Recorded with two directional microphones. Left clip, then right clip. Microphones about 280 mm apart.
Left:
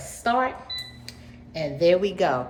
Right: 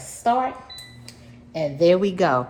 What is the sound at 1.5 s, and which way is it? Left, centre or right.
Speech, right.